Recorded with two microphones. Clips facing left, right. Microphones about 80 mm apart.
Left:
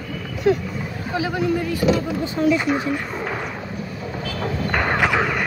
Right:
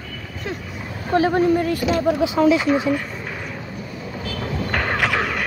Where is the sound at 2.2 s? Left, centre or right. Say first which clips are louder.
Right 3 dB; right.